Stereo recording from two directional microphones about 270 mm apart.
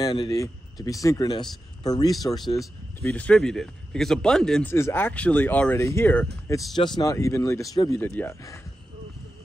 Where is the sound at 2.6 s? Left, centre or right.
Centre.